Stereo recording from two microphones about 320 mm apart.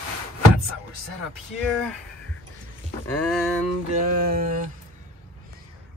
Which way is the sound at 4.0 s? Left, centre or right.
Right.